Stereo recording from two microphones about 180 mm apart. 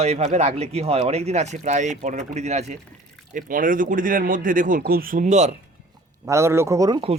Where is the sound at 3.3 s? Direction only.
50° right (ahead or behind).